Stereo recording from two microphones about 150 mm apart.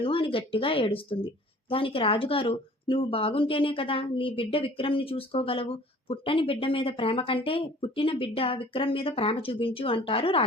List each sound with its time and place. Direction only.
0.0 s speech: 35° left (ahead or behind)